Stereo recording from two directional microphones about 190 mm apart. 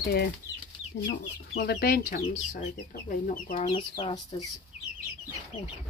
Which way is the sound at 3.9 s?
20° left (ahead or behind).